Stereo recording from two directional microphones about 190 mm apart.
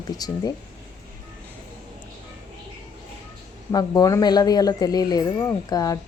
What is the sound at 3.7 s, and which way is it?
Speech, 20° left (ahead or behind).